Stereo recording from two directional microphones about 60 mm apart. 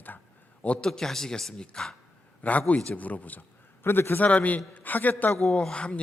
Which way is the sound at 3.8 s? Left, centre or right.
Left.